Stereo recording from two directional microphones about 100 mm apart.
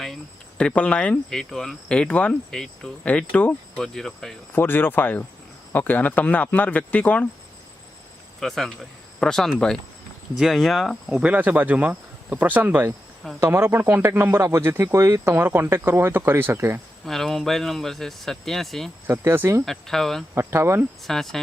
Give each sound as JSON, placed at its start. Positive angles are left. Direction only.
{"t": 0.6, "sound": "cricket", "side_deg": 15}
{"t": 4.5, "sound": "speech", "side_deg": 20}
{"t": 5.7, "sound": "cricket", "side_deg": 15}
{"t": 8.4, "sound": "speech", "side_deg": 5}
{"t": 11.2, "sound": "speech", "side_deg": -15}
{"t": 17.1, "sound": "speech", "side_deg": 5}
{"t": 19.0, "sound": "speech", "side_deg": -25}
{"t": 19.6, "sound": "speech", "side_deg": 0}
{"t": 20.3, "sound": "speech", "side_deg": -25}
{"t": 21.1, "sound": "speech", "side_deg": 5}